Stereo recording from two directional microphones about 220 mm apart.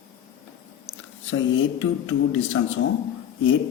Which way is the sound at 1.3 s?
60° left (ahead or behind).